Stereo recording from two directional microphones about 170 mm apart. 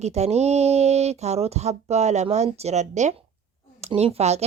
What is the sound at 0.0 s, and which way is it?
Speech, 40° right (ahead or behind).